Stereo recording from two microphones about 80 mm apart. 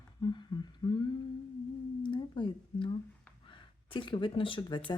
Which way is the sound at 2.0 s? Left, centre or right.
Left.